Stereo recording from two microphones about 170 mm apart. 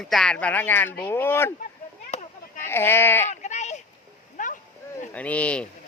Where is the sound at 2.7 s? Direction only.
15° left (ahead or behind).